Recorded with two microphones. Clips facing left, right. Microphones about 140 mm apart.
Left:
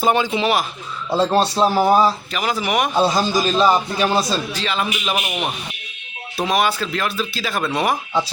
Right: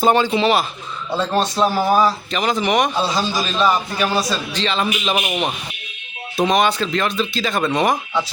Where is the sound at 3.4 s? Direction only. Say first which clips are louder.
Left 3 dB; 35° left (ahead or behind).